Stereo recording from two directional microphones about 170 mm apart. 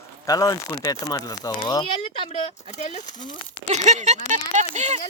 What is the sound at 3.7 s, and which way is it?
Speech, 40° right (ahead or behind).